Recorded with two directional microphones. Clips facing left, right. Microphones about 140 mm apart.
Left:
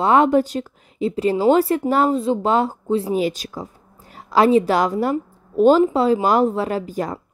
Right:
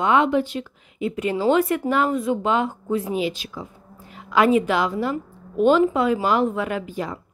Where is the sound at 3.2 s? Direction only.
40° left (ahead or behind).